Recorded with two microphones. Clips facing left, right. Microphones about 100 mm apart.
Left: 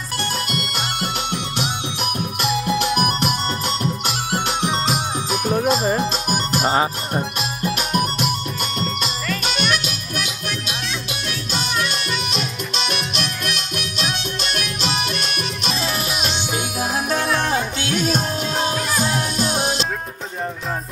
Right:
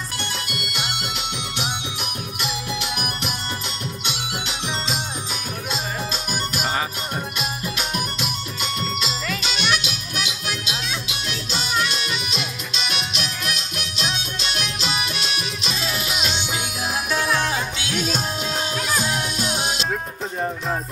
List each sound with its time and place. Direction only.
0.5 s music: 45° left (ahead or behind)
3.2 s music: 60° left (ahead or behind)
4.3 s music: 50° left (ahead or behind)
7.6 s music: 50° left (ahead or behind)
9.4 s music: 50° left (ahead or behind)
14.5 s music: 55° left (ahead or behind)